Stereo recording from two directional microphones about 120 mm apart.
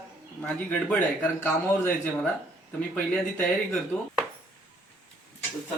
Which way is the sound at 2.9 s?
10° left (ahead or behind).